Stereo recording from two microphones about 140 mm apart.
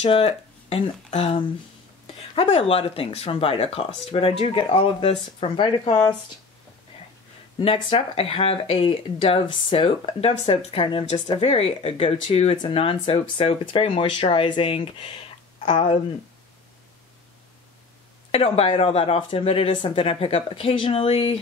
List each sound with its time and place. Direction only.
0.0 s speech: 45° left (ahead or behind)
7.5 s speech: 40° left (ahead or behind)
18.3 s speech: 45° left (ahead or behind)